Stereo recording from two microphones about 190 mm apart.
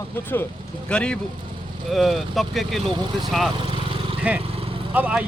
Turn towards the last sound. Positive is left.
turn(degrees=-10)  # may be behind; listen again after turning